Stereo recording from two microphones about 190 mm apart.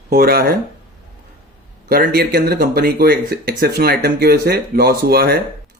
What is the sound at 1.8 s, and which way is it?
Speech, 55° right (ahead or behind).